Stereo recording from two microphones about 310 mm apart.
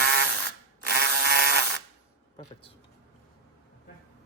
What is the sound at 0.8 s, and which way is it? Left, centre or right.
Toothbrush, right.